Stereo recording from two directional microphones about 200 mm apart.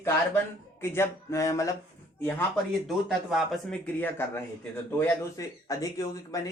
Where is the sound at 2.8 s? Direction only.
Centre (ahead or behind).